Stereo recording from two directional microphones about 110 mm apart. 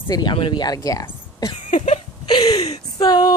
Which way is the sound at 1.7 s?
90° left.